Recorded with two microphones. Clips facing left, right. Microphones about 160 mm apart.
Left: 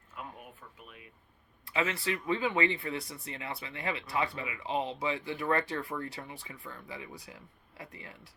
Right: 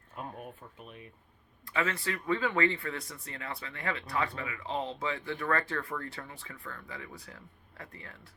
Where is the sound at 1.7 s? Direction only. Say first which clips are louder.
Left 1 dB; 20° left (ahead or behind).